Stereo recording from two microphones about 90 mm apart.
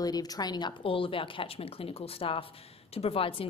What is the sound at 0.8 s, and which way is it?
Speech, 80° left.